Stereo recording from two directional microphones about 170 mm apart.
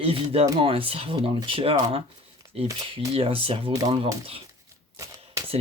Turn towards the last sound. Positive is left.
turn(degrees=-20)  # may be behind; listen again after turning